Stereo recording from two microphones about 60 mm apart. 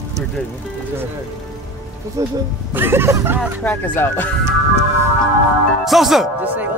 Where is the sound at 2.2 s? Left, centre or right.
Right.